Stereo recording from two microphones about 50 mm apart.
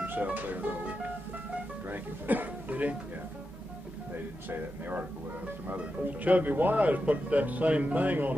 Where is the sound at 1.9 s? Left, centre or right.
Right.